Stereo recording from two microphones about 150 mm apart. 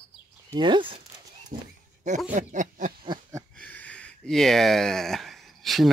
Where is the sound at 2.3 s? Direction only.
60° right (ahead or behind).